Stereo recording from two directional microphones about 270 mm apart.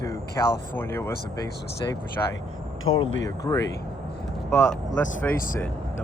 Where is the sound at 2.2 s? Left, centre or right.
Centre.